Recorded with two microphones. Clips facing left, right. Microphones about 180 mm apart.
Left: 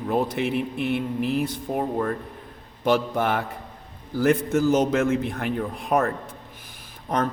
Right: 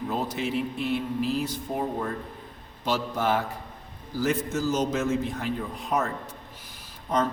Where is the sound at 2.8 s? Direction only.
55° left (ahead or behind).